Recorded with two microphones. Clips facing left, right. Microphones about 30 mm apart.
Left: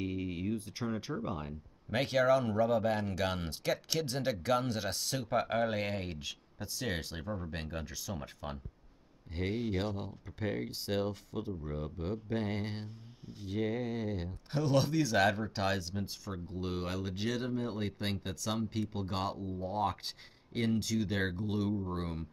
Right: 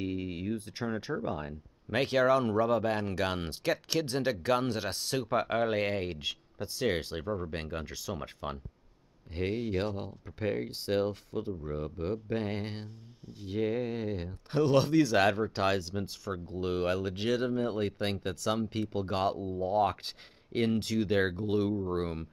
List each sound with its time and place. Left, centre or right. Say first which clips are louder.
0.0 s a sound: right 2 dB; right
1.0 s speech: right 4 dB; right
1.4 s speech: right 3 dB; centre
7.8 s speech: right 4 dB; right